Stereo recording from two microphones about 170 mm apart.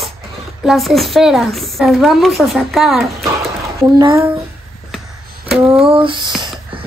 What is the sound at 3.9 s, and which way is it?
Speech, 25° right (ahead or behind).